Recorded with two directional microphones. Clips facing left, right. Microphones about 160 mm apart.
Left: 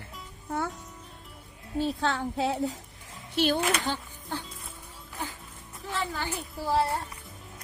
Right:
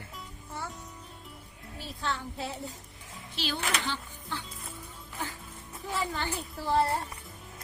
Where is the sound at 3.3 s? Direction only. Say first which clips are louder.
Left 8 dB; 55° left (ahead or behind).